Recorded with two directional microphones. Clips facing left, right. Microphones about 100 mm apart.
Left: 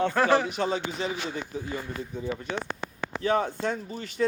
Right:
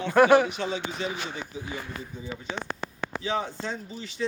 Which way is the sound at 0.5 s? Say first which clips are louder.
Left 3 dB; 40° left (ahead or behind).